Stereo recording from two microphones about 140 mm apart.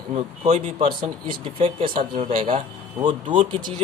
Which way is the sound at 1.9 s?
90° right.